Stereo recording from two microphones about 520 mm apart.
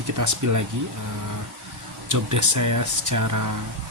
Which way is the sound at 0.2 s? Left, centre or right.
Right.